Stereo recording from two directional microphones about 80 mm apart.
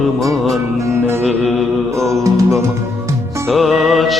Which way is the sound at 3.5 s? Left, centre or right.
Centre.